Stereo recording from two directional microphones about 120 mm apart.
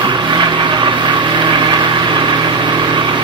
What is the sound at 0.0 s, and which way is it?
Vehicle, 40° right (ahead or behind).